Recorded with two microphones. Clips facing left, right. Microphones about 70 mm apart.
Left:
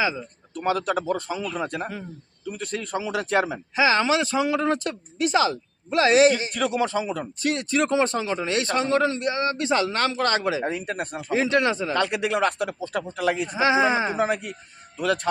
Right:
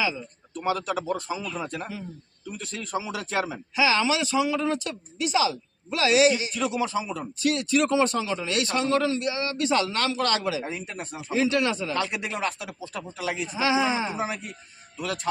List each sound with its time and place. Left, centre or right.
0.6 s a man's voice: left
3.8 s speech: left
10.6 s speech: left
11.9 s speech: left
13.6 s a man's voice: left